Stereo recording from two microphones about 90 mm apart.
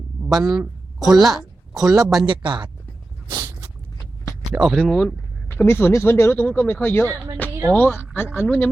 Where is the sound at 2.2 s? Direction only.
60° right (ahead or behind).